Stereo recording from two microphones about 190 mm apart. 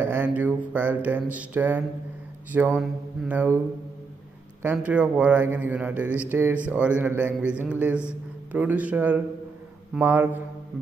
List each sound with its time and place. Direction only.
0.0 s speech: 10° right (ahead or behind)
4.7 s speech: 5° right (ahead or behind)